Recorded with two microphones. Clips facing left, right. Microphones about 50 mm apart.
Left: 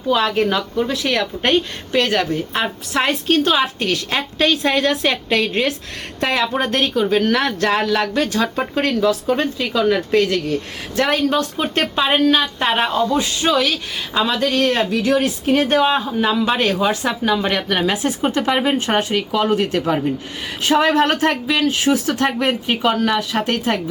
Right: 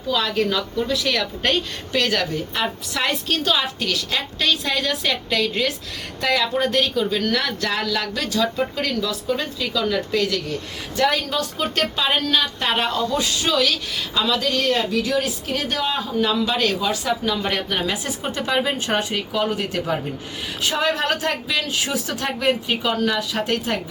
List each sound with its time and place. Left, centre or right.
0.1 s a woman's voice: left
2.3 s a man's voice: left
11.5 s a woman's voice: left
17.5 s a man's voice: left
19.3 s a man's voice: left